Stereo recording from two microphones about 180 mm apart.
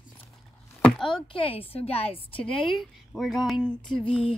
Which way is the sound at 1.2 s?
30° left (ahead or behind).